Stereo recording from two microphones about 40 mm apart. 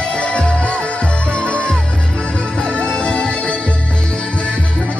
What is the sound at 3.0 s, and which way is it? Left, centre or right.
Music, left.